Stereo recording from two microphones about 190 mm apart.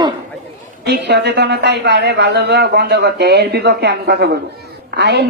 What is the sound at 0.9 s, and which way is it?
A man's voice, 65° right (ahead or behind).